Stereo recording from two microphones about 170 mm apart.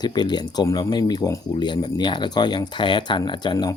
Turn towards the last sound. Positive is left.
turn(degrees=25)  # may be behind; listen again after turning